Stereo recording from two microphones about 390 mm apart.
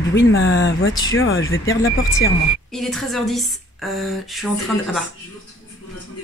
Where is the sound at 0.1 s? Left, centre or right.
Left.